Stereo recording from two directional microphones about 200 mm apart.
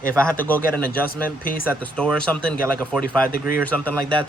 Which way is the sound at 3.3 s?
45° left (ahead or behind).